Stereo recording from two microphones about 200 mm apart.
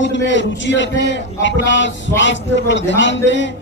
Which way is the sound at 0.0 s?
65° left (ahead or behind).